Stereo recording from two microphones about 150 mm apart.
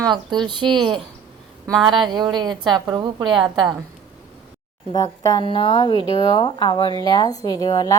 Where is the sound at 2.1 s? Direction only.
30° right (ahead or behind).